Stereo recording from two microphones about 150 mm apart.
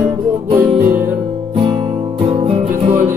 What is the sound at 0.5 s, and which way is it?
Music, 15° right (ahead or behind).